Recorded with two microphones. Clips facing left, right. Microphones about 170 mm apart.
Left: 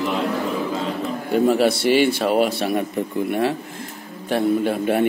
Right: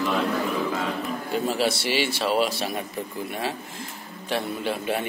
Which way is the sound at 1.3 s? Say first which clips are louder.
Left 8 dB; 55° left (ahead or behind).